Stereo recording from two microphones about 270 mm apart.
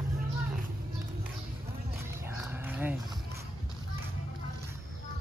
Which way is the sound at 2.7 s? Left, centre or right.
Centre.